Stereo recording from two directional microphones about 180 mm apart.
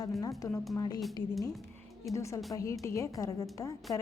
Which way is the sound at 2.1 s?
15° left (ahead or behind).